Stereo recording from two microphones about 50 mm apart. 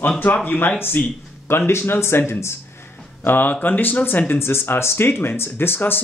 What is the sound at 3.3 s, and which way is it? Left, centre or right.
Speech, left.